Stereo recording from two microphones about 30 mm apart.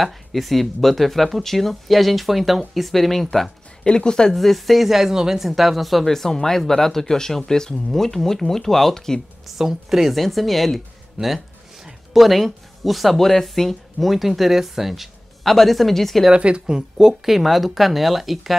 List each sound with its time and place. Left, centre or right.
0.0 s speech: centre
3.8 s speech: left
4.3 s speech: centre
5.1 s speech: right
5.4 s speech: centre
6.0 s speech: centre
9.6 s speech: centre
10.1 s speech: centre
12.1 s speech: centre
14.1 s speech: centre
15.4 s speech: centre
16.3 s speech: right
17.1 s speech: centre